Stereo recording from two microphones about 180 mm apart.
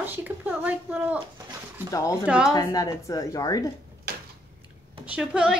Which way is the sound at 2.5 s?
20° left (ahead or behind).